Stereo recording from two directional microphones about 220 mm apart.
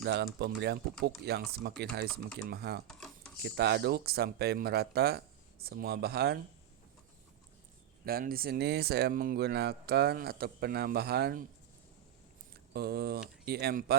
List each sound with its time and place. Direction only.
0.0 s speech: 50° right (ahead or behind)
2.8 s a sound: 5° left (ahead or behind)
3.4 s speech: 50° right (ahead or behind)
8.0 s speech: 40° right (ahead or behind)
12.7 s speech: 45° right (ahead or behind)